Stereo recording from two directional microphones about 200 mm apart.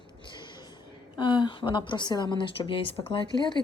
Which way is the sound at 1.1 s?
25° left (ahead or behind).